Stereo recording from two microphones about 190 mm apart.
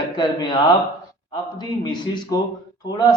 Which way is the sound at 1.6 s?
25° left (ahead or behind).